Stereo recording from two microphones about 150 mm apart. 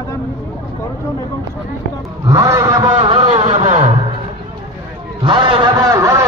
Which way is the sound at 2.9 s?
40° right (ahead or behind).